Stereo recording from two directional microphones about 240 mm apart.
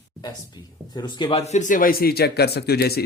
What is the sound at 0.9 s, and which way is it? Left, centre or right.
Speech, centre.